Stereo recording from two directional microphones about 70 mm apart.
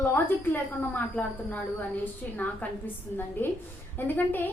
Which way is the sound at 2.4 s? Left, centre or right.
Left.